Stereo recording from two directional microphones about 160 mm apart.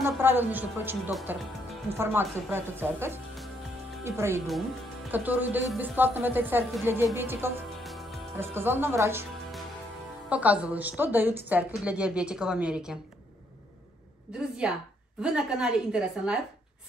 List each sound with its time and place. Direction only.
0.0 s a woman's voice: 15° right (ahead or behind)
7.8 s music: centre (ahead or behind)
8.4 s a woman's voice: 15° right (ahead or behind)
10.3 s a woman's voice: 10° right (ahead or behind)
14.6 s a woman's voice: 5° right (ahead or behind)